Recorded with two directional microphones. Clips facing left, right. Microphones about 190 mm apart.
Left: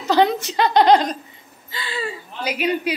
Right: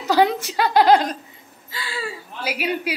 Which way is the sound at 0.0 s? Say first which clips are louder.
Left 1 dB; 10° right (ahead or behind).